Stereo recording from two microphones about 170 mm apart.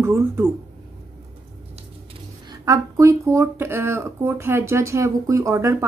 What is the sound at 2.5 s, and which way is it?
A woman's voice, 20° right (ahead or behind).